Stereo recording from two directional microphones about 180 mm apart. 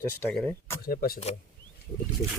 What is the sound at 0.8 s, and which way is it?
Speech, 55° left (ahead or behind).